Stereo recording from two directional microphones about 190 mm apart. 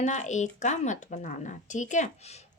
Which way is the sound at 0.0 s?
40° left (ahead or behind).